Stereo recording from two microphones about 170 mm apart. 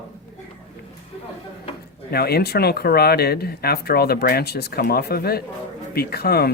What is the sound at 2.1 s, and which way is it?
Speech, 65° left (ahead or behind).